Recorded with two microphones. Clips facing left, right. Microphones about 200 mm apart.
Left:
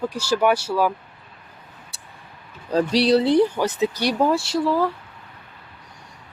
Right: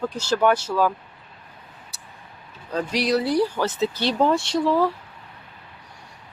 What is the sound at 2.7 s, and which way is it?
Speech, 35° left (ahead or behind).